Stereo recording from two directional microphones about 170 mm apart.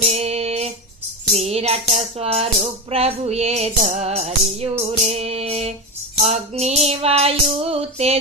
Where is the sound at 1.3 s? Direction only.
40° right (ahead or behind).